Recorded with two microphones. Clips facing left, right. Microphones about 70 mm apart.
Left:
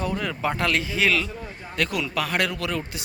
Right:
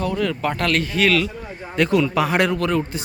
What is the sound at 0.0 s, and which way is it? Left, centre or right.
Speech, centre.